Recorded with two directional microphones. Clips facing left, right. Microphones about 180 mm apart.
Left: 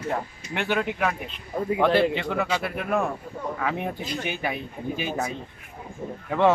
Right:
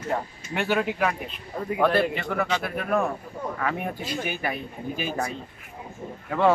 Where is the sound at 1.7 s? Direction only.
25° left (ahead or behind).